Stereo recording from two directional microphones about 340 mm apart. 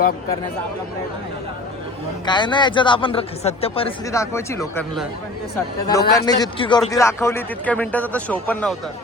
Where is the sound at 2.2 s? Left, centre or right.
Centre.